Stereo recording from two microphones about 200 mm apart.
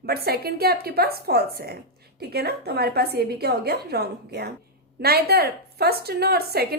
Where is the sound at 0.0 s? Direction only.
50° right (ahead or behind).